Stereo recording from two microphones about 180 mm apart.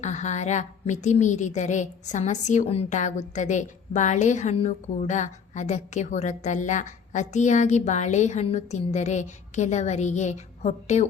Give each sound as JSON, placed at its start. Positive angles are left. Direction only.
{"t": 0.0, "sound": "a woman's voice", "side_deg": 40}